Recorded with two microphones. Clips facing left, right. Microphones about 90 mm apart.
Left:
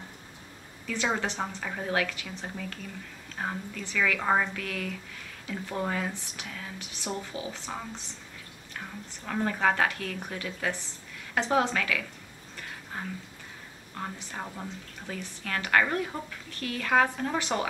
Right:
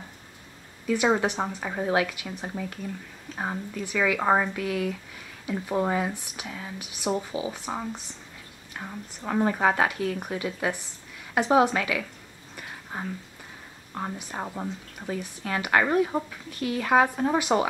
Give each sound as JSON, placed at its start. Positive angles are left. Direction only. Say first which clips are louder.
{"t": 0.8, "sound": "a woman's voice", "louder": "right 7 dB", "side_deg": -15}